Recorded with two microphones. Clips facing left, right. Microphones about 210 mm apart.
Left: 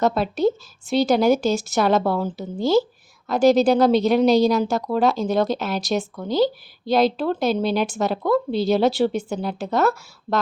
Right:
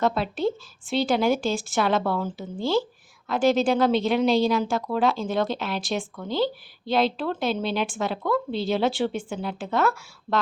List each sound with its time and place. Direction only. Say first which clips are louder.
0.0 s speech: left 4 dB; 40° left (ahead or behind)